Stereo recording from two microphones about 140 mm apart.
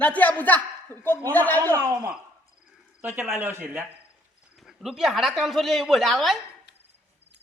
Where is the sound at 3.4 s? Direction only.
15° right (ahead or behind).